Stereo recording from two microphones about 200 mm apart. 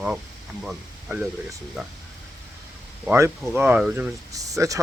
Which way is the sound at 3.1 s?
10° right (ahead or behind).